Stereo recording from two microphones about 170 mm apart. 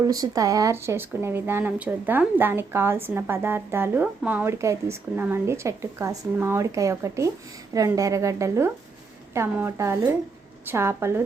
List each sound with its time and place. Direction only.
0.0 s a woman's voice: 20° right (ahead or behind)